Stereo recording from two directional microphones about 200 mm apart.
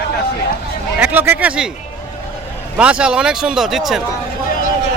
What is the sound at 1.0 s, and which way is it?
Speech, 10° right (ahead or behind).